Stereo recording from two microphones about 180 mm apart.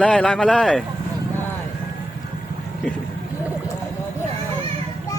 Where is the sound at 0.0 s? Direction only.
5° left (ahead or behind).